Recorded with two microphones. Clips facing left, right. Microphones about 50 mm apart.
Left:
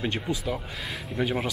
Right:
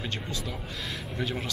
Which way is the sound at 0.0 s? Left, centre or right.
Centre.